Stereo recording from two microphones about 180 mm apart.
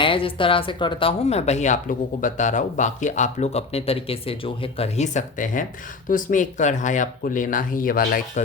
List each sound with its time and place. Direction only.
0.0 s speech: 30° left (ahead or behind); by 8.2 s 50° left (ahead or behind)